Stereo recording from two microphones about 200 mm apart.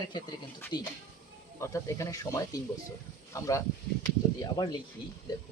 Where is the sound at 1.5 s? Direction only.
15° left (ahead or behind).